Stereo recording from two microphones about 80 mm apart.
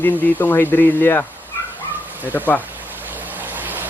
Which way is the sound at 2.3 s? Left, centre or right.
Left.